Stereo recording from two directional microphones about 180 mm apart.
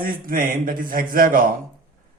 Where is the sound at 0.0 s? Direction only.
50° right (ahead or behind).